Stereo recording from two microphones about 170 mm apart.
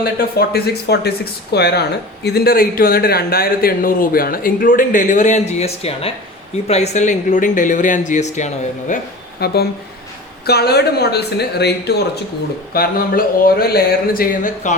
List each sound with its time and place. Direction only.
0.0 s speech: 65° left (ahead or behind); by 9.0 s 45° left (ahead or behind)
9.4 s speech: 70° left (ahead or behind)
12.7 s speech: 60° left (ahead or behind)